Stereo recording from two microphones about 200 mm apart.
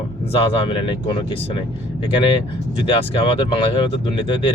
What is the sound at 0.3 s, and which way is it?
Speech, 25° left (ahead or behind).